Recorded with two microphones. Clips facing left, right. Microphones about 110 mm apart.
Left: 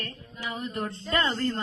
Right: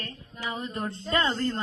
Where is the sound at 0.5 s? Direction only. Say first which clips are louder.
Left 1 dB; 30° right (ahead or behind).